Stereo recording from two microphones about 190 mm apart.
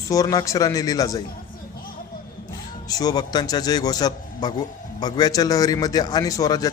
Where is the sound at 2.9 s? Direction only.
20° left (ahead or behind).